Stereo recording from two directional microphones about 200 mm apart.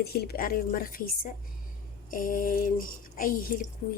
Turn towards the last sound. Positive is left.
turn(degrees=45)  # may be behind; listen again after turning